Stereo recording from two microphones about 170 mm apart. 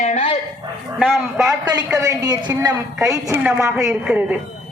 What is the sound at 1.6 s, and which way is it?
A woman's voice, 25° right (ahead or behind).